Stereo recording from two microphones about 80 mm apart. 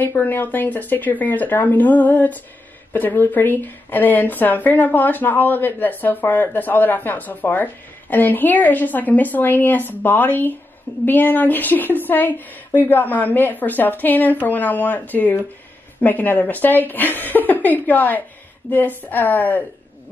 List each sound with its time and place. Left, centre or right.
0.0 s speech: left